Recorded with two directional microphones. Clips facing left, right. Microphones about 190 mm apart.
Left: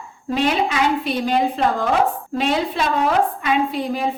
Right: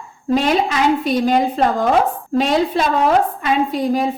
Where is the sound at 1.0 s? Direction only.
40° right (ahead or behind).